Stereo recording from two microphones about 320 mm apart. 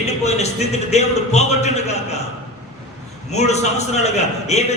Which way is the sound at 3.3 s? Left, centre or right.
Left.